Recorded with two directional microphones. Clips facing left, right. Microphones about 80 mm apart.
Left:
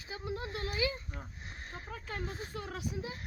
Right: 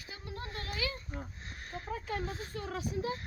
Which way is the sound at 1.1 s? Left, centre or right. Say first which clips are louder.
Right 4 dB; right.